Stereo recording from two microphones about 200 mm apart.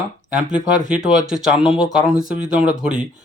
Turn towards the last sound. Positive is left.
turn(degrees=-5)  # may be behind; listen again after turning